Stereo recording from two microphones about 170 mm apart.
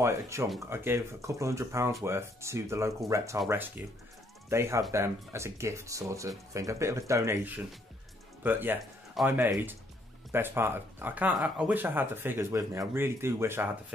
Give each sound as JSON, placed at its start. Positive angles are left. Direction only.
{"t": 0.0, "sound": "speech", "side_deg": -15}